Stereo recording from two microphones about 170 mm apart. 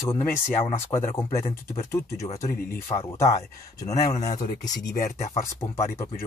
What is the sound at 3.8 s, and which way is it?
Speech, 40° left (ahead or behind).